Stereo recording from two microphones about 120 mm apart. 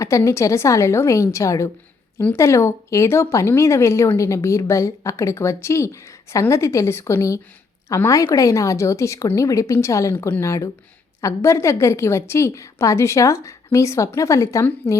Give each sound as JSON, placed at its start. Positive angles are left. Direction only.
{"t": 0.0, "sound": "speech", "side_deg": 25}